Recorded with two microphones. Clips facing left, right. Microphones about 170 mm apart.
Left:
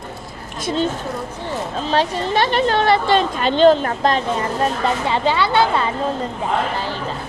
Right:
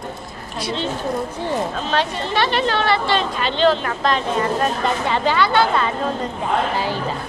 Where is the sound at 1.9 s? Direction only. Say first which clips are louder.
Left 3 dB; 40° left (ahead or behind).